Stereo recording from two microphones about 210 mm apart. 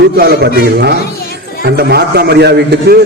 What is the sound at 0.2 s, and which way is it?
A man's voice, 50° right (ahead or behind).